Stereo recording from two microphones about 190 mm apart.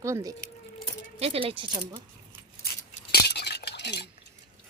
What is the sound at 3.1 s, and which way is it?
Cutlery, 60° left (ahead or behind).